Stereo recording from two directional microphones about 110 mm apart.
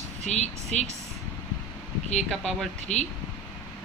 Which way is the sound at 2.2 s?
5° left (ahead or behind).